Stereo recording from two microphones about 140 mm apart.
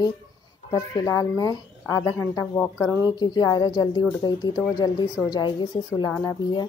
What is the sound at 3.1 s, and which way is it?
A woman's voice, 30° left (ahead or behind).